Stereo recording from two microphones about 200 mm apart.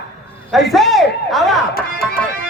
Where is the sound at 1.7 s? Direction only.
50° left (ahead or behind).